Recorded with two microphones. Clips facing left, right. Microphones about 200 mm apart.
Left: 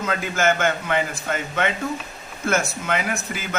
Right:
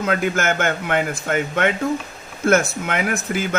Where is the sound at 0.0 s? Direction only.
55° right (ahead or behind).